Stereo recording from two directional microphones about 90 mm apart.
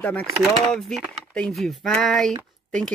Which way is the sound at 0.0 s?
15° left (ahead or behind).